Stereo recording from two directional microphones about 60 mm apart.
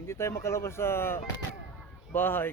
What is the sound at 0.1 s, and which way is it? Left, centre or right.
Speech, left.